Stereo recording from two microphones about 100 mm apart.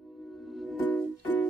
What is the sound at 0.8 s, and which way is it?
Music, 15° left (ahead or behind).